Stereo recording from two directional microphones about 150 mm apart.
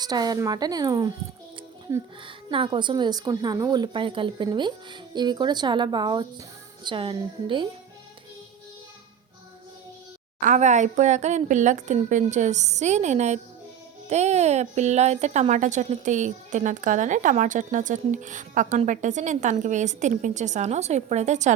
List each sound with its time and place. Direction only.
0.0 s a woman's voice: 25° right (ahead or behind)
2.2 s a woman's voice: 35° right (ahead or behind)
10.4 s speech: 55° right (ahead or behind)